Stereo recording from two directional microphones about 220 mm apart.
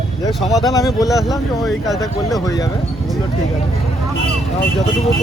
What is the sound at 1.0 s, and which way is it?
Speech, centre (ahead or behind).